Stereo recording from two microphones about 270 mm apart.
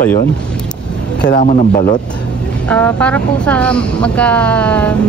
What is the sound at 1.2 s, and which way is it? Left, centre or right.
Speech, left.